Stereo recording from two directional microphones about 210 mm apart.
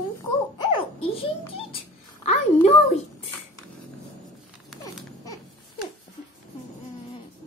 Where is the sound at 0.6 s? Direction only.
20° left (ahead or behind).